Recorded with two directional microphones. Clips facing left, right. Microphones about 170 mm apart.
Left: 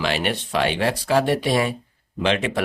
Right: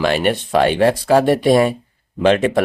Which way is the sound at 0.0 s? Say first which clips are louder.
Right 7 dB; 50° right (ahead or behind).